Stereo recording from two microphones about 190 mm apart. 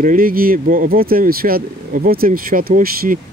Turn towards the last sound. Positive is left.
turn(degrees=-50)  # may be behind; listen again after turning